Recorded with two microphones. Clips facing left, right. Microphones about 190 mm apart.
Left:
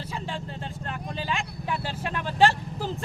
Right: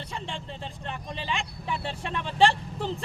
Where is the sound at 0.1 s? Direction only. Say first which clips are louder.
Left 3 dB; 5° left (ahead or behind).